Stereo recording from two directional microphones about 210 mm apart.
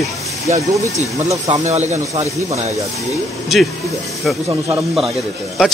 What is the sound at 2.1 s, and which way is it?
Speech, 30° right (ahead or behind).